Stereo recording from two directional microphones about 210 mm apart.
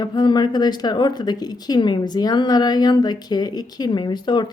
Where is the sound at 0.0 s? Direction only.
20° left (ahead or behind).